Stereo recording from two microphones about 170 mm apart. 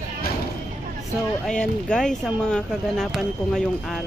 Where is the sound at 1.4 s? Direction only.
5° left (ahead or behind).